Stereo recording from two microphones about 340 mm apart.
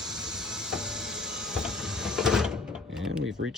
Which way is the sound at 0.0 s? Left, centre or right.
Centre.